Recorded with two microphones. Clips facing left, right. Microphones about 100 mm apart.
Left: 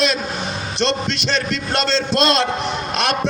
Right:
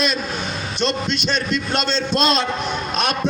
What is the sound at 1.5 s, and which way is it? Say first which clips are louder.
A man's voice: left 1 dB; 80° left.